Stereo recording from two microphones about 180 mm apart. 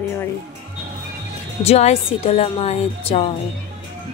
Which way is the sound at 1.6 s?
35° left (ahead or behind).